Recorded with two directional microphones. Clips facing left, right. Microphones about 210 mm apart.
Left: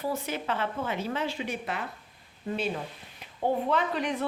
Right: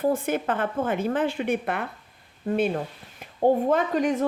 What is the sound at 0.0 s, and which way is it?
Speech, 50° right (ahead or behind).